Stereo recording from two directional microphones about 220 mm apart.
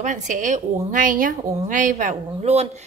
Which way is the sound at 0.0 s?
35° right (ahead or behind).